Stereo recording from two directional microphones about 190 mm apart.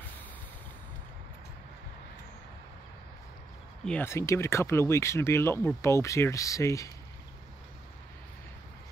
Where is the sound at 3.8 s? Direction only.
10° left (ahead or behind).